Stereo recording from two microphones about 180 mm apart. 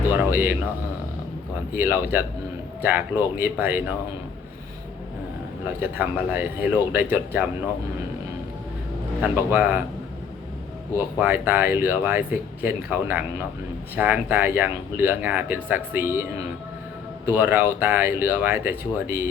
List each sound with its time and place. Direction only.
0.3 s speech: 10° right (ahead or behind)
1.7 s speech: 10° right (ahead or behind)
5.8 s speech: 10° right (ahead or behind)
9.2 s speech: 10° right (ahead or behind)
10.9 s speech: 10° right (ahead or behind)
17.2 s speech: 10° right (ahead or behind)